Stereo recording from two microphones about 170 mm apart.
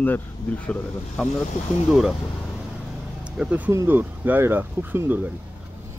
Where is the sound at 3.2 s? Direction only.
5° right (ahead or behind).